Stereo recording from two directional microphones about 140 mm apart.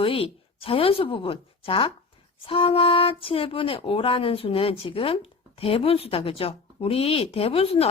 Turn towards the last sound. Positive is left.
turn(degrees=45)  # may be behind; listen again after turning